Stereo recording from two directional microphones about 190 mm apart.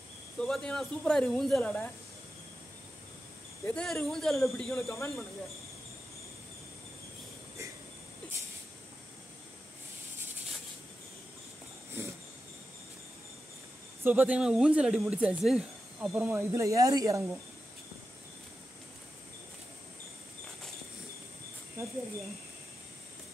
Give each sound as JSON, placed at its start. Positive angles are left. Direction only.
{"t": 0.4, "sound": "speech", "side_deg": 5}
{"t": 3.6, "sound": "speech", "side_deg": 5}
{"t": 4.8, "sound": "speech", "side_deg": 15}
{"t": 14.0, "sound": "speech", "side_deg": -10}